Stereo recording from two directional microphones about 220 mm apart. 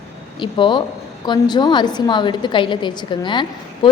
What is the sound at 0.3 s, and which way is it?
A woman's voice, 20° left (ahead or behind).